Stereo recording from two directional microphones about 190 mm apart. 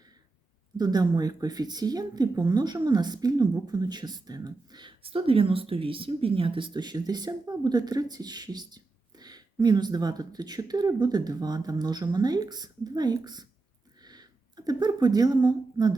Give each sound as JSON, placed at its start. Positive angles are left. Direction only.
{"t": 0.8, "sound": "a woman's voice", "side_deg": -20}